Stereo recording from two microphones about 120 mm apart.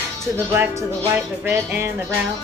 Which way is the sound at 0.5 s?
20° right (ahead or behind).